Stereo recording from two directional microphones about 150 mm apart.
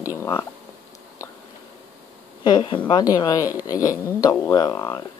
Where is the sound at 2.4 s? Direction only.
30° left (ahead or behind).